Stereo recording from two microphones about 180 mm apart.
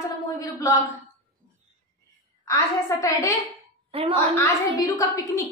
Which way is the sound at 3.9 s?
30° right (ahead or behind).